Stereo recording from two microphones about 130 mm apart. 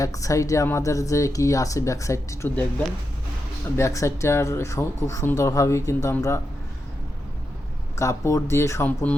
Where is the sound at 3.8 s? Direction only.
20° left (ahead or behind).